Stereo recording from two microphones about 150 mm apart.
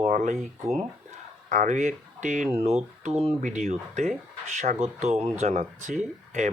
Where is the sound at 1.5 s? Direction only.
55° right (ahead or behind).